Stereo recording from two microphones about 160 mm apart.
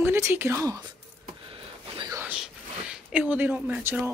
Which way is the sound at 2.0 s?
20° right (ahead or behind).